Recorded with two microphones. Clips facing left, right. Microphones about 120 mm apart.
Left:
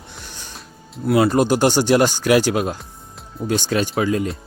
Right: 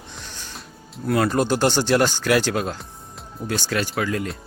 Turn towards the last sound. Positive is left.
turn(degrees=20)  # may be behind; listen again after turning